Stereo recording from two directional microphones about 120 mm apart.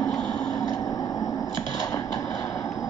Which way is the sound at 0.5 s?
30° left (ahead or behind).